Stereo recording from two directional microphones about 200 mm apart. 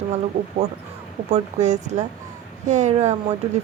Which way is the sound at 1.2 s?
35° right (ahead or behind).